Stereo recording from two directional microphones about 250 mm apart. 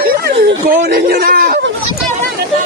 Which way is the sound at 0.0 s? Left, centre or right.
Right.